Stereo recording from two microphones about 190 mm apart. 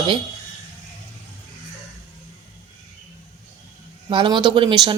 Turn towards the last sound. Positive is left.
turn(degrees=-25)  # may be behind; listen again after turning